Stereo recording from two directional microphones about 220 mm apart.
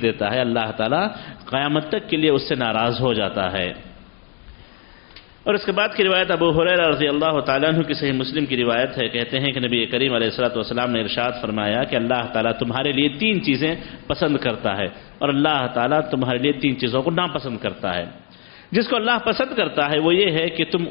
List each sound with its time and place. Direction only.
0.0 s a man's voice: 15° left (ahead or behind)
5.4 s a man's voice: 10° left (ahead or behind)
16.3 s a man's voice: 10° left (ahead or behind)